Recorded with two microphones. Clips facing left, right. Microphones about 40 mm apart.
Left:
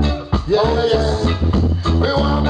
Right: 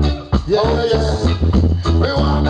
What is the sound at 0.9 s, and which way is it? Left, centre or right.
Music, centre.